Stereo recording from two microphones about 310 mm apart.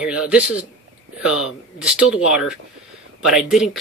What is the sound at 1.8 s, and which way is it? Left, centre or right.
Speech, centre.